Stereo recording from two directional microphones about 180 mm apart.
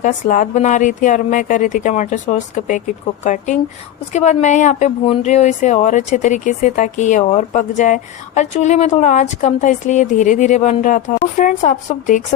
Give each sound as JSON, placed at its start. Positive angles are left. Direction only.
{"t": 0.0, "sound": "a woman's voice", "side_deg": 45}